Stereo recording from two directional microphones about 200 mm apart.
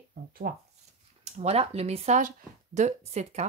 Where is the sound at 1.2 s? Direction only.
30° right (ahead or behind).